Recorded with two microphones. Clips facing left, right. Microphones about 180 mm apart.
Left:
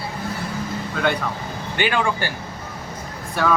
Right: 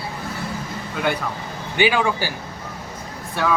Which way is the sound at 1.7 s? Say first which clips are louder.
Right 3 dB; 10° right (ahead or behind).